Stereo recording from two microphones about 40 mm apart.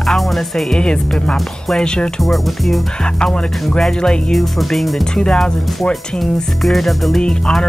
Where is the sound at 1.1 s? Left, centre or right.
Centre.